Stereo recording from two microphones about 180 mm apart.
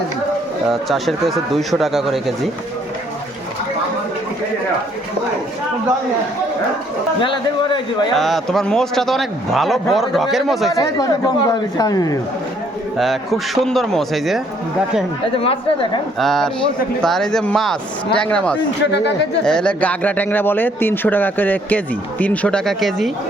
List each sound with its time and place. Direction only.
0.7 s a man's voice: centre (ahead or behind)
7.2 s speech: 25° left (ahead or behind)
8.1 s a man's voice: centre (ahead or behind)
10.8 s speech: 20° left (ahead or behind)
13.0 s a man's voice: centre (ahead or behind)
15.4 s a woman's voice: 30° left (ahead or behind)
16.1 s a man's voice: centre (ahead or behind)
18.9 s speech: 70° left (ahead or behind)
19.5 s a man's voice: 5° left (ahead or behind)